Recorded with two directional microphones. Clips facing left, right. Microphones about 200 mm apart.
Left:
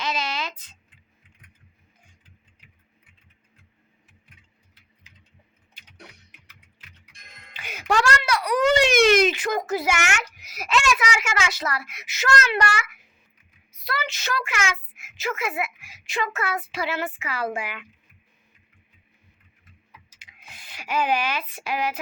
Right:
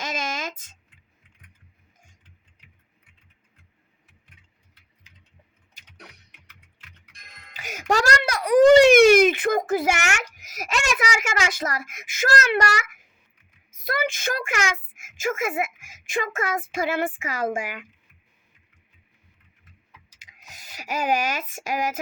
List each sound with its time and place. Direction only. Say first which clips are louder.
0.0 s a sound: left 1 dB; 45° right (ahead or behind)
7.5 s a child's voice: even; 45° right (ahead or behind)
9.0 s speech: right 4 dB; 10° right (ahead or behind)
9.2 s a child's voice: right 3 dB; 55° right (ahead or behind)
20.1 s speech: right 1 dB; 40° right (ahead or behind)